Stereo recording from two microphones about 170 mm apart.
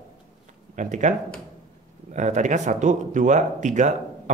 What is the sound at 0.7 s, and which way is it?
Speech, 45° right (ahead or behind).